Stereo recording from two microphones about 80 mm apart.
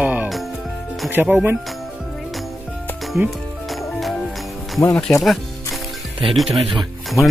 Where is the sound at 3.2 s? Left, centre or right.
Right.